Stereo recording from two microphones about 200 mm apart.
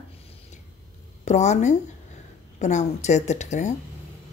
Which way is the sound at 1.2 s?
35° left (ahead or behind).